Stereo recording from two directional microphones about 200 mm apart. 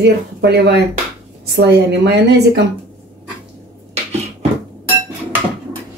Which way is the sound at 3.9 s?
30° right (ahead or behind).